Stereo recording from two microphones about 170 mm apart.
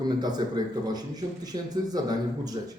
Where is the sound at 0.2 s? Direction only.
25° right (ahead or behind).